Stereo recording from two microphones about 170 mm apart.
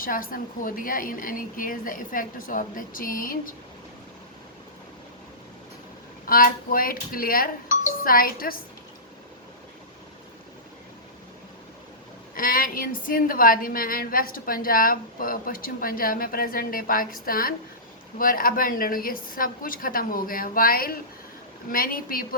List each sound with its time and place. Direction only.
0.0 s a woman's voice: 55° left (ahead or behind)
6.2 s a woman's voice: 55° left (ahead or behind)
12.3 s a woman's voice: 55° left (ahead or behind)